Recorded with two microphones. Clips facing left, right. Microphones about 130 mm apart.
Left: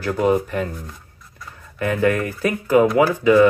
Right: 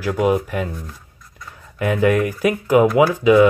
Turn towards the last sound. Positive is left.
turn(degrees=-15)  # may be behind; listen again after turning